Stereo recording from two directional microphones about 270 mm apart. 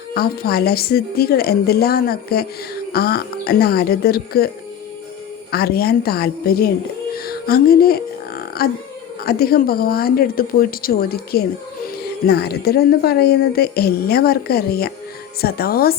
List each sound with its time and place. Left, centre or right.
0.1 s speech: left
5.5 s speech: left
7.3 s a sound: left
9.2 s speech: left